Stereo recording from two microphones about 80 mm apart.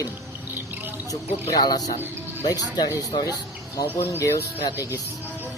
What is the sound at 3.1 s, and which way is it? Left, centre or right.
Speech, left.